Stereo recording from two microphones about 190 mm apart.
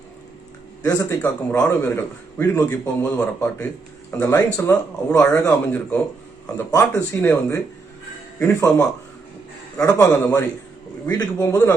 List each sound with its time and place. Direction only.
0.8 s a man's voice: 20° left (ahead or behind)